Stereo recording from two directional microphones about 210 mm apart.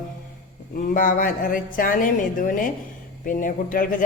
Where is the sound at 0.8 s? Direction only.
40° left (ahead or behind).